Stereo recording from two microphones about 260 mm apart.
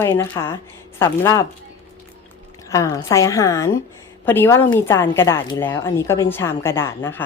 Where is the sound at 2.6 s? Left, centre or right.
Centre.